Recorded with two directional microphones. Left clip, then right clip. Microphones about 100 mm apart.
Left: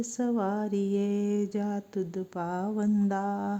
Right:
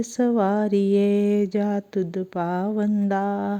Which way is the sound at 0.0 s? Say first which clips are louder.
Right 8 dB; 30° right (ahead or behind).